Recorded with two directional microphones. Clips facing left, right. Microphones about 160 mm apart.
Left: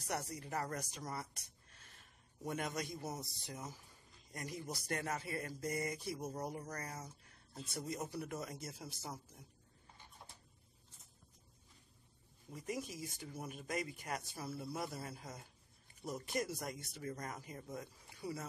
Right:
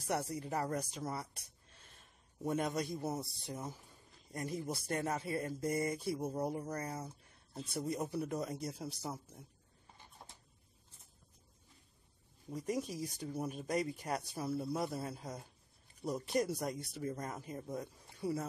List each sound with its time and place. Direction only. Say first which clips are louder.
0.0 s speech: right 5 dB; 30° right (ahead or behind)
2.4 s speech: right 6 dB; 30° right (ahead or behind)
8.2 s speech: right 6 dB; 30° right (ahead or behind)
12.5 s speech: right 6 dB; 40° right (ahead or behind)